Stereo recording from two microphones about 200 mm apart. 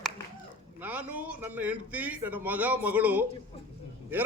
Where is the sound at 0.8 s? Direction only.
10° right (ahead or behind).